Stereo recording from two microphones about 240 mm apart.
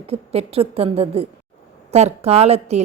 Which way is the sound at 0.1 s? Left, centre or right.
Right.